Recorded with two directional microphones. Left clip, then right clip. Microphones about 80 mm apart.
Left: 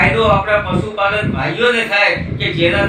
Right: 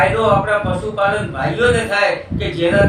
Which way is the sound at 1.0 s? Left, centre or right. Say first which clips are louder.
Left 1 dB; right.